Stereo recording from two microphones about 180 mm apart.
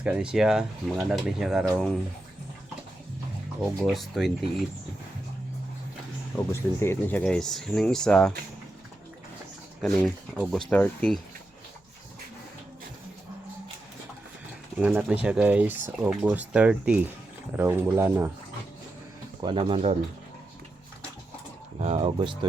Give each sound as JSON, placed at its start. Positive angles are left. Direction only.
{"t": 0.0, "sound": "speech", "side_deg": -5}
{"t": 3.6, "sound": "speech", "side_deg": 0}
{"t": 6.3, "sound": "speech", "side_deg": 15}
{"t": 9.8, "sound": "speech", "side_deg": 5}
{"t": 14.8, "sound": "speech", "side_deg": -10}
{"t": 19.4, "sound": "speech", "side_deg": -30}
{"t": 21.8, "sound": "speech", "side_deg": -35}